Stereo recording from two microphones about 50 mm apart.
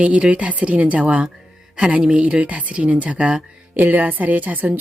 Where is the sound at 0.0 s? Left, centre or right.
Right.